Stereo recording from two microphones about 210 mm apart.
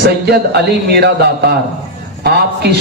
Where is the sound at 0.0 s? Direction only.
50° right (ahead or behind).